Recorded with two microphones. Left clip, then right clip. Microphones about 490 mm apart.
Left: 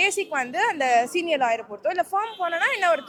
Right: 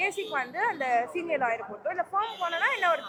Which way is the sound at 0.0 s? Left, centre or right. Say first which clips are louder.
Left 6 dB; left.